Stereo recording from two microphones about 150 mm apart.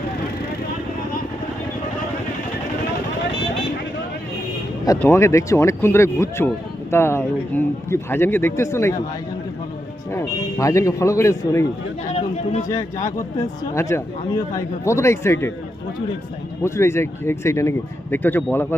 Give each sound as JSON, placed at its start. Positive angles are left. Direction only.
{"t": 4.9, "sound": "a man's voice", "side_deg": 20}
{"t": 10.1, "sound": "a man's voice", "side_deg": 20}
{"t": 12.1, "sound": "speech", "side_deg": 45}
{"t": 12.6, "sound": "a man's voice", "side_deg": 25}
{"t": 16.6, "sound": "speech", "side_deg": 20}